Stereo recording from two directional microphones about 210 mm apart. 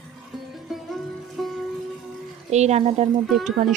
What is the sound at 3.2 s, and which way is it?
Speech, centre (ahead or behind).